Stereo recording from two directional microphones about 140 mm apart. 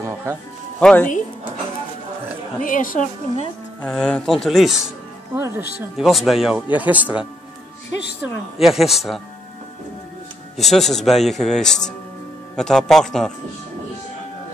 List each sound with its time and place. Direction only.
0.0 s music: 20° right (ahead or behind)
0.7 s speech: 5° left (ahead or behind)
2.6 s a woman's voice: 70° left (ahead or behind)
3.8 s speech: 5° left (ahead or behind)
5.3 s speech: 15° right (ahead or behind)
5.9 s speech: centre (ahead or behind)
10.6 s speech: centre (ahead or behind)